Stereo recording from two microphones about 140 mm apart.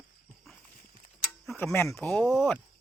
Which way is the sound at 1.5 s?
15° left (ahead or behind).